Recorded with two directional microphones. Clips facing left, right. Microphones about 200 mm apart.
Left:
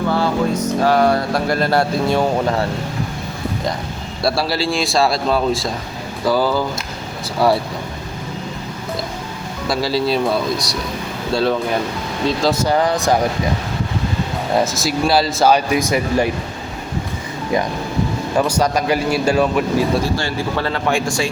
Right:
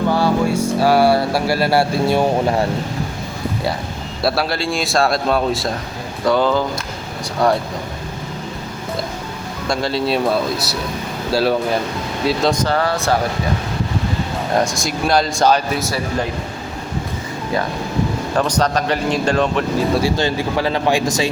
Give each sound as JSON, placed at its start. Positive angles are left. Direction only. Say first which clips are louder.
{"t": 0.1, "sound": "a sound", "louder": "right 1 dB", "side_deg": -10}
{"t": 4.2, "sound": "speech", "louder": "even", "side_deg": 0}
{"t": 9.6, "sound": "speech", "louder": "left 1 dB", "side_deg": 5}
{"t": 12.5, "sound": "speech", "louder": "left 2 dB", "side_deg": 15}
{"t": 14.5, "sound": "speech", "louder": "left 1 dB", "side_deg": 5}
{"t": 18.3, "sound": "speech", "louder": "left 1 dB", "side_deg": 10}
{"t": 20.1, "sound": "speech", "louder": "right 2 dB", "side_deg": -15}